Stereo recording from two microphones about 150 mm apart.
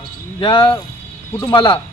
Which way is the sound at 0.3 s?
35° left (ahead or behind).